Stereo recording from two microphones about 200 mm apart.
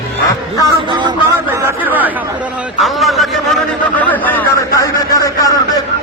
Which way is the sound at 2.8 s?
Centre (ahead or behind).